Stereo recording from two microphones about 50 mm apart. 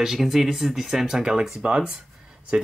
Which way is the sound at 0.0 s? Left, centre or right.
Centre.